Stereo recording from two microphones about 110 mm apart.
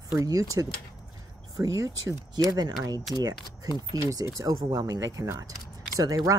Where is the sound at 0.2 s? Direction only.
30° right (ahead or behind).